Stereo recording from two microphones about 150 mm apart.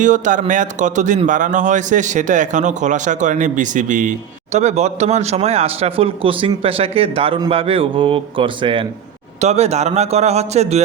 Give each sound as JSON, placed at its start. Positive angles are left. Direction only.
{"t": 0.0, "sound": "a man's voice", "side_deg": -55}
{"t": 4.5, "sound": "speech", "side_deg": -45}
{"t": 9.4, "sound": "a man's voice", "side_deg": -45}